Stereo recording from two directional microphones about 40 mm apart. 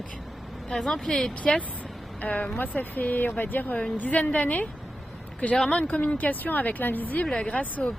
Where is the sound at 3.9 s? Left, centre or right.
Left.